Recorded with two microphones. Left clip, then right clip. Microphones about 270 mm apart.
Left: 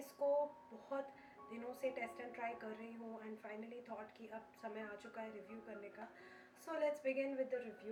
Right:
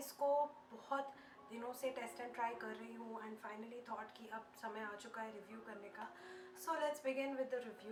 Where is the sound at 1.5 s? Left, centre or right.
Centre.